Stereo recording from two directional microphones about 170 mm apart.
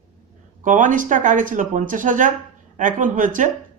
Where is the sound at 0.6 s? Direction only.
50° right (ahead or behind).